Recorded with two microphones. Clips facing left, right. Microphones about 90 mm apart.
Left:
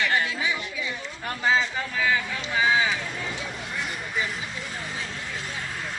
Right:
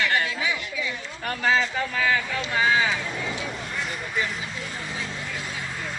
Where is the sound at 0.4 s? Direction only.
25° left (ahead or behind).